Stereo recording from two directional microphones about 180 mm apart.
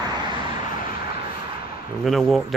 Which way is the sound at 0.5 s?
50° left (ahead or behind).